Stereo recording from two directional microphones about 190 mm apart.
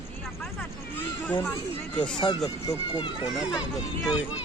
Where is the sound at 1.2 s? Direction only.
10° left (ahead or behind).